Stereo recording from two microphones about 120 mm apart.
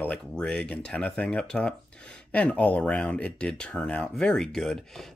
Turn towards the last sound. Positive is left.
turn(degrees=5)  # may be behind; listen again after turning